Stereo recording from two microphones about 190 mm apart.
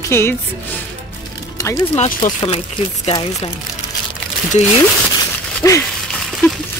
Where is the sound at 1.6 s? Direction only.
15° left (ahead or behind).